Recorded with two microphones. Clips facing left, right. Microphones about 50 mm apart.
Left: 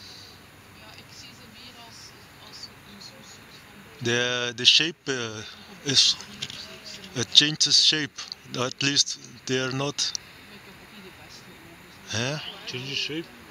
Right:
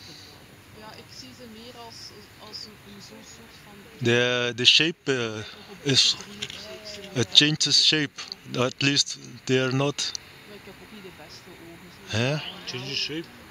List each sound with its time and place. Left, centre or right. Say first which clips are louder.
4.0 s speech: right 3 dB; centre
12.1 s speech: right 3 dB; centre
12.6 s speech: even; left